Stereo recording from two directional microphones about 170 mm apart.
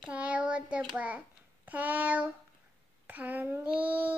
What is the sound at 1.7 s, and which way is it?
Child singing, 10° right (ahead or behind).